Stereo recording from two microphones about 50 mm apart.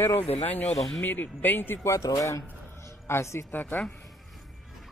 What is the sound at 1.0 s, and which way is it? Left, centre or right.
Speech, left.